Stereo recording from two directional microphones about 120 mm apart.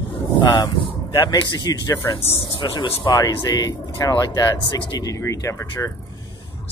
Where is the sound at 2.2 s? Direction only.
50° left (ahead or behind).